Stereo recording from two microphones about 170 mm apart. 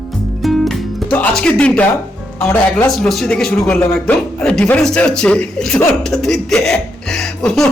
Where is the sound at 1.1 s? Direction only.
10° left (ahead or behind).